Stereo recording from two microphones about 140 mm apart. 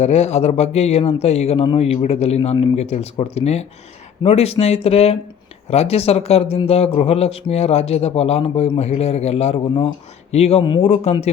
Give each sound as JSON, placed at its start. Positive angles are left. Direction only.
{"t": 0.0, "sound": "speech", "side_deg": 50}